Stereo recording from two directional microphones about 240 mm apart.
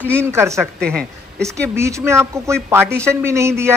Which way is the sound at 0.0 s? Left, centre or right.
Centre.